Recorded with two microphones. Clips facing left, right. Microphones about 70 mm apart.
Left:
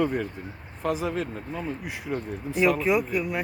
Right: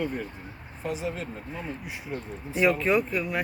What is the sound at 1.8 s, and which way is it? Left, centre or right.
Speech, left.